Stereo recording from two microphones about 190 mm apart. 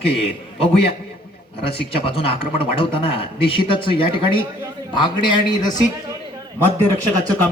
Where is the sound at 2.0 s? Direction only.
30° left (ahead or behind).